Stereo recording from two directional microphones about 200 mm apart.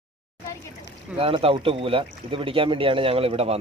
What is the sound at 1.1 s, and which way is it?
Speech, 30° right (ahead or behind).